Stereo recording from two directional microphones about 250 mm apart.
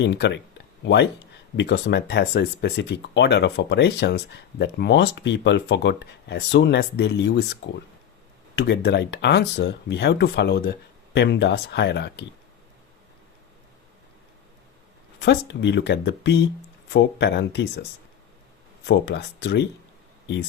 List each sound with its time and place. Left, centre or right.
0.0 s speech: left
1.5 s speech: left
8.5 s speech: left
15.2 s speech: left
18.9 s speech: left